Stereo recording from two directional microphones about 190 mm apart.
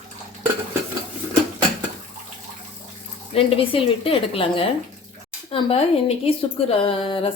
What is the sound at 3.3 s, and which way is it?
Speech, 30° left (ahead or behind).